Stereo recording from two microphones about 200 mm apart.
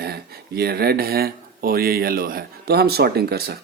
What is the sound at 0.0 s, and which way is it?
Speech, 50° right (ahead or behind).